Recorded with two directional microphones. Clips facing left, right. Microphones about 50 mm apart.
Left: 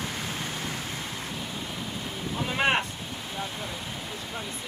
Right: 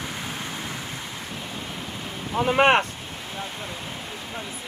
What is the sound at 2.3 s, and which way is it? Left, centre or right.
Speech, right.